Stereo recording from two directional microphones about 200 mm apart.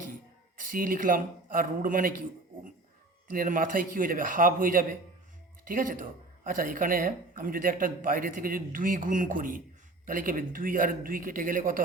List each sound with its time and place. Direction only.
0.5 s a woman's voice: 45° right (ahead or behind)
3.3 s a woman's voice: 45° right (ahead or behind)